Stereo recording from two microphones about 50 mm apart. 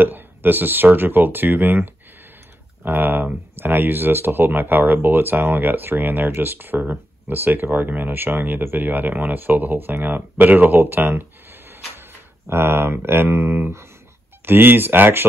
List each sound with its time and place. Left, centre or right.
0.0 s speech: right
12.4 s speech: right